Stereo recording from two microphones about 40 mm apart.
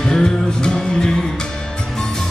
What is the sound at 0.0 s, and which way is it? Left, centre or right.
Music, centre.